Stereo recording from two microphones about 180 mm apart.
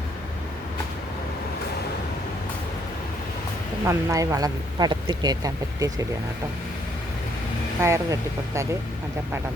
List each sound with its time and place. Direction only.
3.8 s speech: 20° right (ahead or behind)
7.8 s speech: 15° right (ahead or behind)